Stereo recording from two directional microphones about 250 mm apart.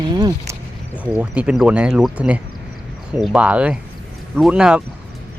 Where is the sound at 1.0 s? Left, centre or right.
Centre.